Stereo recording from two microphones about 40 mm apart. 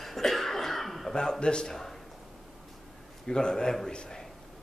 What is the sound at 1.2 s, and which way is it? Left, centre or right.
Speech, left.